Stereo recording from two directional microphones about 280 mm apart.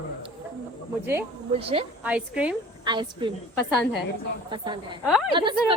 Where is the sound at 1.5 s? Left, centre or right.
Centre.